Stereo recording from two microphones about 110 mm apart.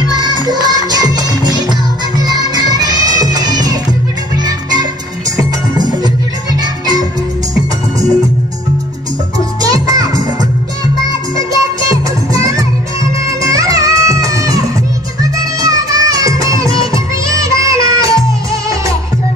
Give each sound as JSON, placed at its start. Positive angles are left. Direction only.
{"t": 0.1, "sound": "music", "side_deg": -40}
{"t": 9.6, "sound": "music", "side_deg": -35}
{"t": 11.3, "sound": "music", "side_deg": -30}
{"t": 15.6, "sound": "music", "side_deg": -30}